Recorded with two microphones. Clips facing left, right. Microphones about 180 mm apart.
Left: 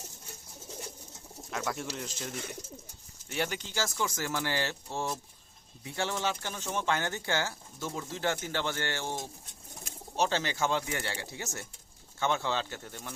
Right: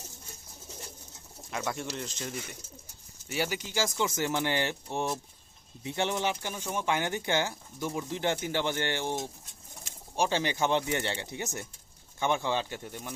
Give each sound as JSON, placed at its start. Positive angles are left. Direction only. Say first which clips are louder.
{"t": 1.5, "sound": "speech", "louder": "right 1 dB", "side_deg": 0}